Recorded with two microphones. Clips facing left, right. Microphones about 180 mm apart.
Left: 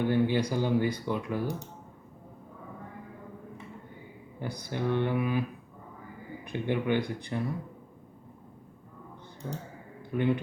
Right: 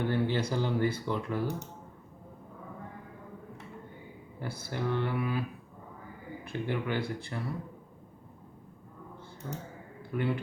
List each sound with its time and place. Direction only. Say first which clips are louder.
0.1 s speech: left 3 dB; 15° left (ahead or behind)
4.4 s speech: left 2 dB; 15° left (ahead or behind)
6.4 s speech: left 3 dB; 20° left (ahead or behind)
9.4 s speech: left 2 dB; 20° left (ahead or behind)